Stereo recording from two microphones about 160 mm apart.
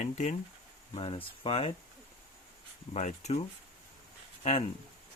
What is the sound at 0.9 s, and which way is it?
Speech, 35° left (ahead or behind).